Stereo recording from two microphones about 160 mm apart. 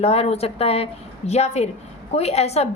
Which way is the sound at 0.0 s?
40° left (ahead or behind).